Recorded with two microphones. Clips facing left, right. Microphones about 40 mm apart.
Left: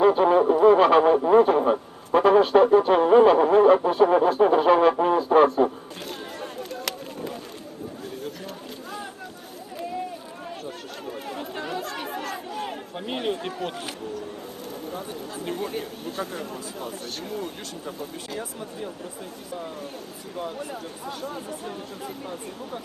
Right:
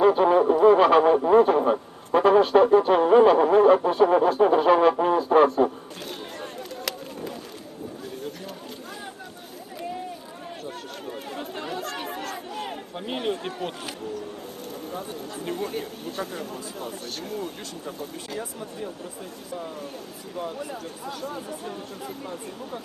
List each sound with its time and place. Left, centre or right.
0.0 s radio: centre
11.7 s chatter: centre
13.1 s speech: centre
15.4 s speech: centre
20.7 s speech: left